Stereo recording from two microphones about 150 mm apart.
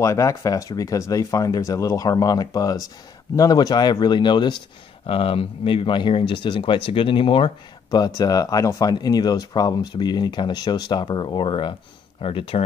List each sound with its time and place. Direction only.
0.0 s speech: 20° left (ahead or behind); by 12.6 s 40° left (ahead or behind)